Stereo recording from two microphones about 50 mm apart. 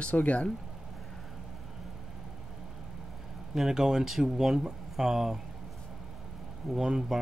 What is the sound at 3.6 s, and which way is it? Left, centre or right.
Speech, centre.